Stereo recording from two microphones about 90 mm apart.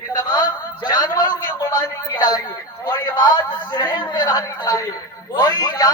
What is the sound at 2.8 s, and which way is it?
A man's voice, 50° left (ahead or behind).